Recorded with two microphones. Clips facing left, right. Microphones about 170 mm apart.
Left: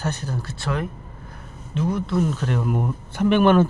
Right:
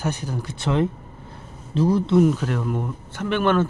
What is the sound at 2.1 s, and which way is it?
Speech, 10° right (ahead or behind).